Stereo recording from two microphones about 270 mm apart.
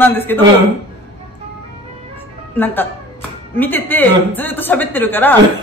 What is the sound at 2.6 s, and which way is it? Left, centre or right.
Speech, centre.